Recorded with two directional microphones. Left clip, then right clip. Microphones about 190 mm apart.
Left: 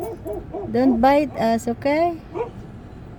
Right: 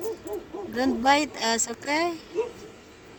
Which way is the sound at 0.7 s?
15° right (ahead or behind).